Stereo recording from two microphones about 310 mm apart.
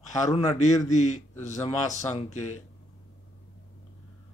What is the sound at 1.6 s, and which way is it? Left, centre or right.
Speech, centre.